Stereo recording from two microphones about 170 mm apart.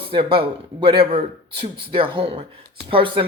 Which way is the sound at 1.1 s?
75° right (ahead or behind).